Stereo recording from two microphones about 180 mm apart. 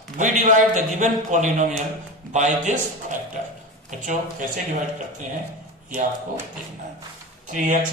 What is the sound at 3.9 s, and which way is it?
Speech, 45° right (ahead or behind).